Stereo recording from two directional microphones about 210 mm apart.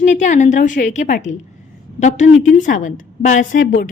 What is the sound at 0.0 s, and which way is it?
A woman's voice, 35° left (ahead or behind).